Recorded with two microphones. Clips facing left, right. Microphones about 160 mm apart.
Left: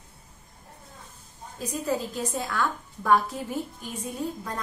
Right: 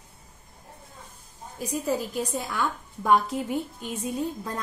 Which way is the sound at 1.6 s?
10° right (ahead or behind).